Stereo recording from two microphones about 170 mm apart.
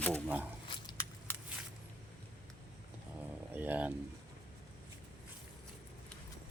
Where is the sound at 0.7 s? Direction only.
25° left (ahead or behind).